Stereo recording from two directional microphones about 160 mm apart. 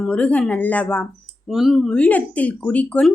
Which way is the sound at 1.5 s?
Centre (ahead or behind).